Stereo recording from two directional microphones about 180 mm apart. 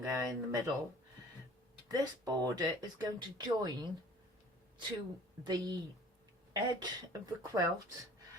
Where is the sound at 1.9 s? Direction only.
20° right (ahead or behind).